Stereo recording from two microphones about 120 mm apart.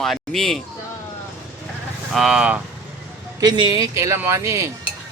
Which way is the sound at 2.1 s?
5° right (ahead or behind).